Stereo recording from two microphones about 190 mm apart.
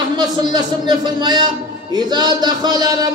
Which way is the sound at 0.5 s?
25° right (ahead or behind).